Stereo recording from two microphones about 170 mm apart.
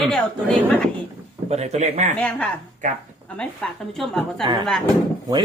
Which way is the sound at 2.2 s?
5° left (ahead or behind).